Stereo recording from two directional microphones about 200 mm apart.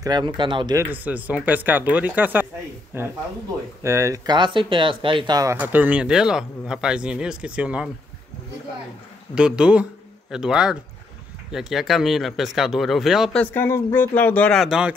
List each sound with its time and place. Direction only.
0.0 s speech: 20° right (ahead or behind)
0.8 s speech: 10° right (ahead or behind)
9.3 s speech: 5° right (ahead or behind)